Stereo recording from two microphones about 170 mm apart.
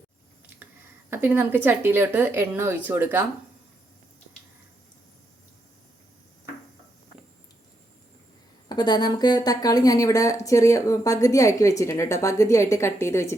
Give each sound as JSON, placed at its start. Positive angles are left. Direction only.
{"t": 1.1, "sound": "a woman's voice", "side_deg": -10}
{"t": 8.7, "sound": "a woman's voice", "side_deg": 25}